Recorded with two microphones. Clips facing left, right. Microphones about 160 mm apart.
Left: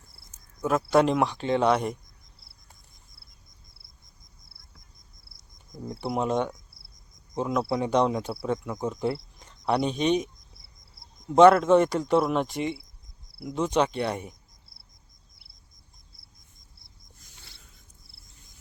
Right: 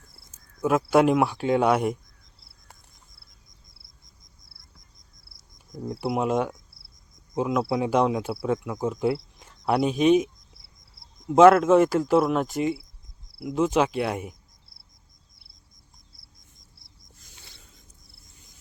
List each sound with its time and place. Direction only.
0.9 s speech: 5° right (ahead or behind)
5.7 s speech: centre (ahead or behind)
11.3 s speech: 5° right (ahead or behind)